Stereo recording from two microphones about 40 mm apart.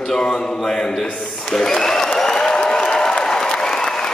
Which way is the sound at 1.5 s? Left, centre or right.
Centre.